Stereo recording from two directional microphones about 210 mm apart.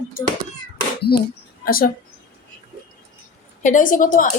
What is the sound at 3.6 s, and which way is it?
Speech, 40° left (ahead or behind).